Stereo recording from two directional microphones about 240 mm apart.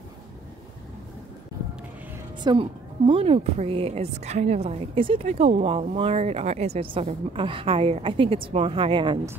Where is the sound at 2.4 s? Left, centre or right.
Right.